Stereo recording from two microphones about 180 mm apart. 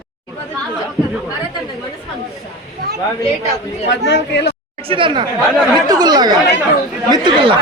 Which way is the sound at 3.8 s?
75° left (ahead or behind).